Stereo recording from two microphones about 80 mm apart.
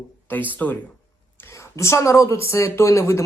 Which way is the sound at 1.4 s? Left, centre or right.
Left.